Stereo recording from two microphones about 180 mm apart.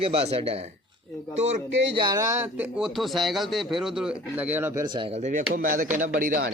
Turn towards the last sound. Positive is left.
turn(degrees=-50)  # may be behind; listen again after turning